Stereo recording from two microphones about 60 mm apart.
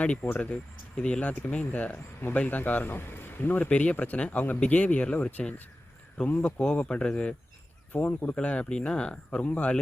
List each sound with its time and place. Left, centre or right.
0.0 s a man's voice: centre; by 3.7 s left
3.7 s speech: left
7.9 s speech: left